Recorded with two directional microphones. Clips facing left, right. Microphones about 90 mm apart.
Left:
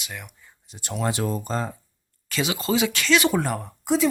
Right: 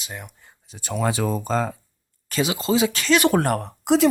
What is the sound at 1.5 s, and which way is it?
Speech, 90° right.